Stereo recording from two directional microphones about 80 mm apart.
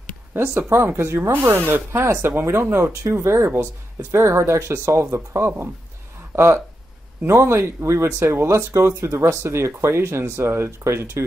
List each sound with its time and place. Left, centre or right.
0.3 s speech: right